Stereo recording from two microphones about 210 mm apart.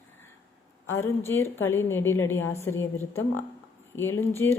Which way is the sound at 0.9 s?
10° left (ahead or behind).